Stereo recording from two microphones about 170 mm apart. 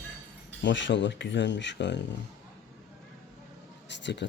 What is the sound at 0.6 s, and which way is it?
Speech, 90° left.